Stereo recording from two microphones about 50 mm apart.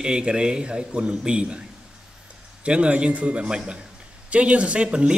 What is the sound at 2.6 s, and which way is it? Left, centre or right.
Speech, right.